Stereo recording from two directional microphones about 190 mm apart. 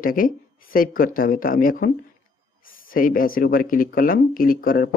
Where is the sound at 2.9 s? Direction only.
45° left (ahead or behind).